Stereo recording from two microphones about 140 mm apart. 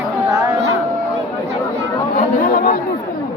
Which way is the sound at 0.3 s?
20° right (ahead or behind).